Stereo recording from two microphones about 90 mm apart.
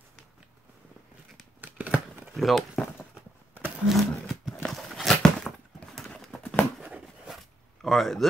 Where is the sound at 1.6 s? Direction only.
15° right (ahead or behind).